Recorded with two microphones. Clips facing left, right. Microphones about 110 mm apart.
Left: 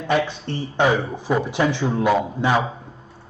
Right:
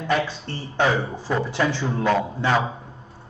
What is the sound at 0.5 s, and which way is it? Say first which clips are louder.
A man's voice: left 3 dB; 15° left (ahead or behind).